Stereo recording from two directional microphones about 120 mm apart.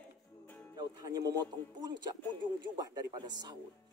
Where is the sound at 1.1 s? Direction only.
30° right (ahead or behind).